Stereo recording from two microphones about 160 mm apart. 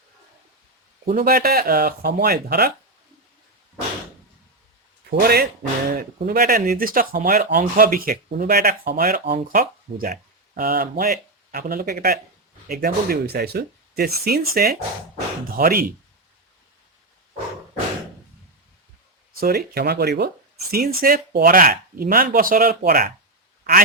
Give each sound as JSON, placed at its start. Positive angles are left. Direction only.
{"t": 1.0, "sound": "speech", "side_deg": -65}
{"t": 5.1, "sound": "speech", "side_deg": -70}
{"t": 19.4, "sound": "speech", "side_deg": -70}